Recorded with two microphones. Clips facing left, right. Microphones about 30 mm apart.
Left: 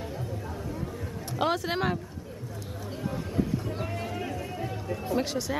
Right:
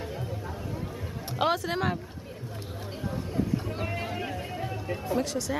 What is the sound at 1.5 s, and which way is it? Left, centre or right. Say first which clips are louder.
Speech: even; centre.